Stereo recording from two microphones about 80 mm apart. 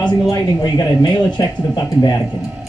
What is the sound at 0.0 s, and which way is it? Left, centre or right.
Speech, left.